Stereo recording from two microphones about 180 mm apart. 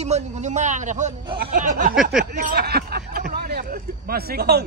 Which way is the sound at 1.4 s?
45° right (ahead or behind).